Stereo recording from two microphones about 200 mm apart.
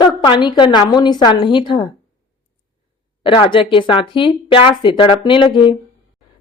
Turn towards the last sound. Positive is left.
turn(degrees=25)  # may be behind; listen again after turning